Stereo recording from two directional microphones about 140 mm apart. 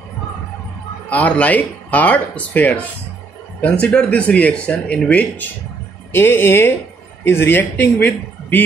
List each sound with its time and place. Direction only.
1.1 s speech: 10° left (ahead or behind)
3.8 s speech: 5° left (ahead or behind)